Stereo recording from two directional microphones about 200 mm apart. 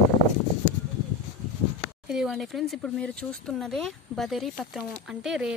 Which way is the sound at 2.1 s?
5° right (ahead or behind).